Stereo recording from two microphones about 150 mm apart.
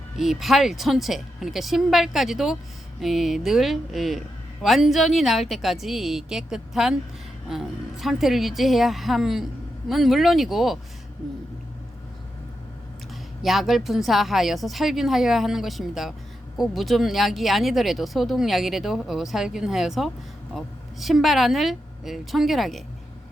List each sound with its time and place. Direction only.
0.2 s speech: centre (ahead or behind)
13.4 s speech: centre (ahead or behind)